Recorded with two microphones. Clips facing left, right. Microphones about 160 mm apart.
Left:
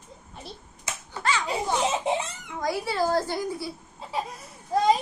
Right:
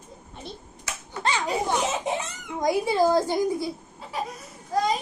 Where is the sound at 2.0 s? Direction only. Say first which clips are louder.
Left 2 dB; 25° left (ahead or behind).